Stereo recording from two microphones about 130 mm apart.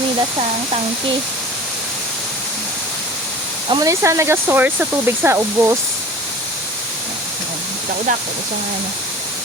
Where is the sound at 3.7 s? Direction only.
30° right (ahead or behind).